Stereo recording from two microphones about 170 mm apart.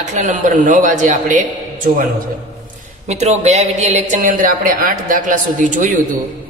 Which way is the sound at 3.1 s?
40° right (ahead or behind).